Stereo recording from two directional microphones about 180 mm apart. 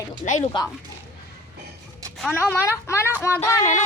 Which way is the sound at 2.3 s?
15° left (ahead or behind).